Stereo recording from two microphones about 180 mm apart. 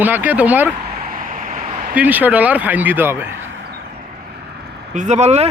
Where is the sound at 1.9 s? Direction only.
10° right (ahead or behind).